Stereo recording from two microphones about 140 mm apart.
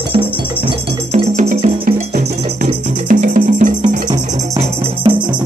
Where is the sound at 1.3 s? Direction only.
70° right (ahead or behind).